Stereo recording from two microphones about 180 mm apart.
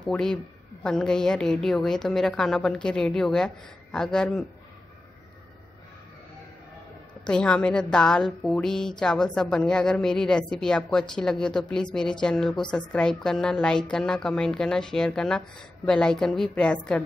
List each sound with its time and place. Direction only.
0.8 s a woman's voice: 5° left (ahead or behind)
7.2 s a woman's voice: 5° left (ahead or behind)